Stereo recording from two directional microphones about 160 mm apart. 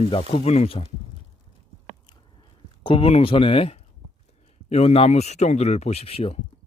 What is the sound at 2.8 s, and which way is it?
Speech, 35° left (ahead or behind).